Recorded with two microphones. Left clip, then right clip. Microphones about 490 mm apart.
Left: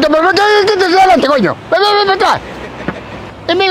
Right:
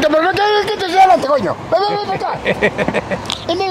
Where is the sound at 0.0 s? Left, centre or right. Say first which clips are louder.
Left 4 dB; left.